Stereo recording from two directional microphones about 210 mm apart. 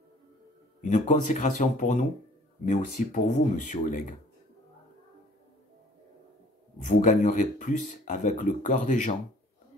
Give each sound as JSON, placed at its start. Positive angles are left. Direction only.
{"t": 0.7, "sound": "speech", "side_deg": 35}
{"t": 6.8, "sound": "speech", "side_deg": 35}